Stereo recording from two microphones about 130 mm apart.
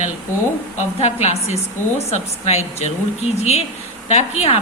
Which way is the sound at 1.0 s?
55° left (ahead or behind).